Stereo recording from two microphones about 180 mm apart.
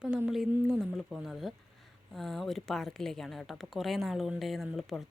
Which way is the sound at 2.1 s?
Centre (ahead or behind).